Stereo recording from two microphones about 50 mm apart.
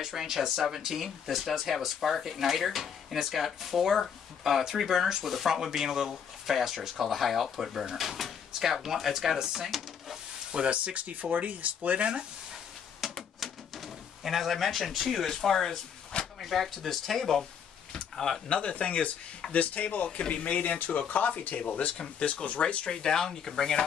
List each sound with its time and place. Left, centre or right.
0.0 s speech: centre
10.5 s speech: right
13.0 s typewriter: centre
16.3 s speech: centre
17.9 s a sound: centre
18.5 s speech: left